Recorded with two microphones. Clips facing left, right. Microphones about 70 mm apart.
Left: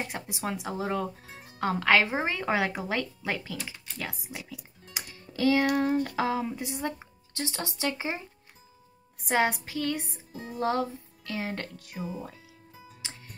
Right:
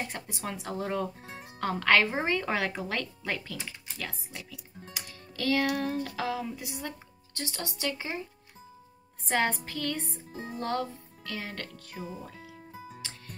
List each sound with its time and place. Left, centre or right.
0.1 s a woman's voice: centre
4.9 s music: centre
9.2 s a woman's voice: centre
10.3 s music: right
10.6 s music: centre
12.7 s music: right